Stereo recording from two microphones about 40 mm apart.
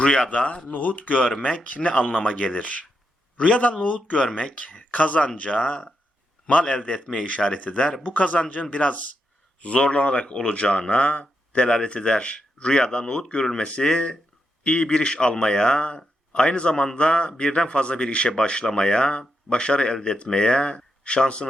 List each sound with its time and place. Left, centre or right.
0.0 s speech: left
0.7 s speech: left
7.0 s speech: left